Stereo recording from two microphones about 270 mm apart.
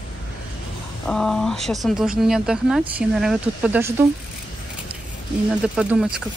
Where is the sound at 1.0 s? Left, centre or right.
Centre.